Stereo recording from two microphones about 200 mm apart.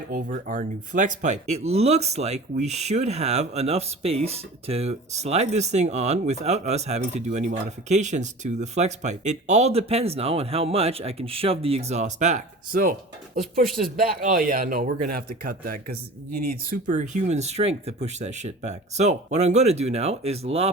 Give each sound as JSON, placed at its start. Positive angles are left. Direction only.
{"t": 0.1, "sound": "speech", "side_deg": -45}